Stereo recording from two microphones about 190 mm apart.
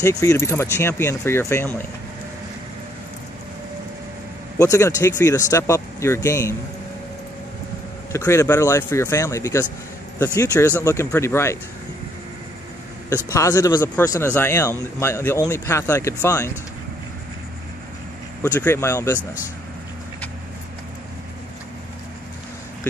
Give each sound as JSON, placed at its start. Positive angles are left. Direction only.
{"t": 0.0, "sound": "a man's voice", "side_deg": 15}
{"t": 4.6, "sound": "a man's voice", "side_deg": 15}
{"t": 8.1, "sound": "a man's voice", "side_deg": 15}
{"t": 13.3, "sound": "a man's voice", "side_deg": 20}
{"t": 18.4, "sound": "a man's voice", "side_deg": 10}